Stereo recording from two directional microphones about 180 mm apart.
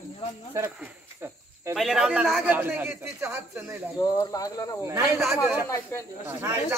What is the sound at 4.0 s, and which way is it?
Speech, 20° left (ahead or behind).